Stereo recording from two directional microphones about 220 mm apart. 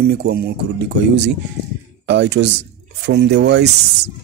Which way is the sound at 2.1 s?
50° right (ahead or behind).